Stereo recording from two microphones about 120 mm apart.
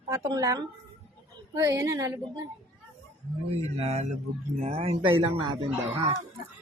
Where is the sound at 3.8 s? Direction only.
65° right (ahead or behind); by 6.1 s 45° right (ahead or behind).